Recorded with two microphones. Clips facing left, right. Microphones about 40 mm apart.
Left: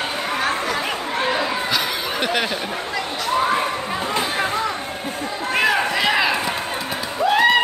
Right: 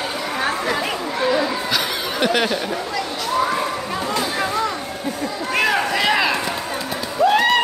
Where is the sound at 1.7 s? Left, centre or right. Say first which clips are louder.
Right 1 dB; centre.